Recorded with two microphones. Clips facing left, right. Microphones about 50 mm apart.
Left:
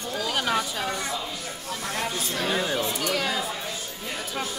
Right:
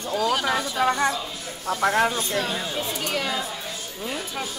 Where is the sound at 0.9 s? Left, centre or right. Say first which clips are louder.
Right 7 dB; right.